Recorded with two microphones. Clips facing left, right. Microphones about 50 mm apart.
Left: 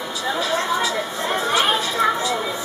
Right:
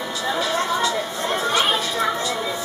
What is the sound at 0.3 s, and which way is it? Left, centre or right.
Chatter, centre.